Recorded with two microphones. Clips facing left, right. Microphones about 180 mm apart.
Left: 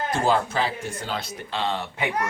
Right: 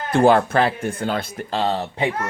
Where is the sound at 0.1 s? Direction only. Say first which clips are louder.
Right 9 dB; 60° right (ahead or behind); by 2.0 s 40° right (ahead or behind).